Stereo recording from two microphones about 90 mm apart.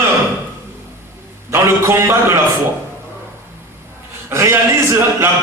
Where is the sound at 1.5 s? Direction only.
30° right (ahead or behind).